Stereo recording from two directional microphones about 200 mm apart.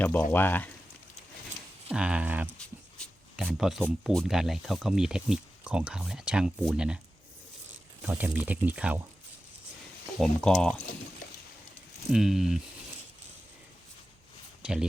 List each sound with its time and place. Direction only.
0.0 s speech: 10° left (ahead or behind)
1.9 s speech: 5° right (ahead or behind)
2.6 s writing: 5° left (ahead or behind)
4.1 s speech: centre (ahead or behind)
8.0 s speech: 5° right (ahead or behind)
10.2 s speech: centre (ahead or behind)
12.1 s speech: centre (ahead or behind)
14.6 s speech: 5° right (ahead or behind)